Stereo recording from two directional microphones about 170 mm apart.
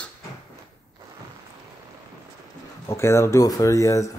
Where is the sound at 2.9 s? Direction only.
15° left (ahead or behind).